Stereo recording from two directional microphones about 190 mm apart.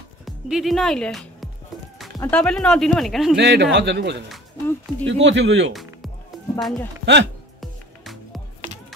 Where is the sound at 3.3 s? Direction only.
65° right (ahead or behind).